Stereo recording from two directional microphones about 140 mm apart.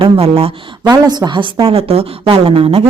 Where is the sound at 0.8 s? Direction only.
30° right (ahead or behind).